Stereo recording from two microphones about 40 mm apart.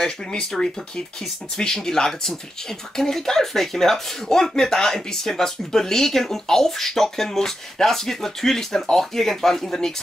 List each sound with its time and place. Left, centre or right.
0.0 s speech: left